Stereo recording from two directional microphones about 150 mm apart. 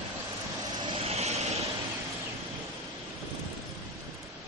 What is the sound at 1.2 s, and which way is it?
Vehicle, 45° right (ahead or behind).